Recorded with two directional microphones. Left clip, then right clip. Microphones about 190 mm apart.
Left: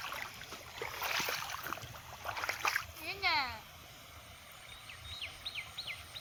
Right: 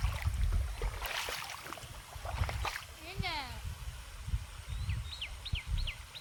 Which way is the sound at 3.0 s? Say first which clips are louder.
Left 6 dB; 20° right (ahead or behind).